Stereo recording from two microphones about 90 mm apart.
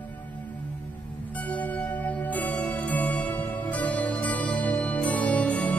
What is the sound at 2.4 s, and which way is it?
Music, 15° left (ahead or behind).